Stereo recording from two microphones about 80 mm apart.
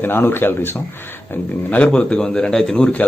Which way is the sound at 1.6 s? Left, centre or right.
Centre.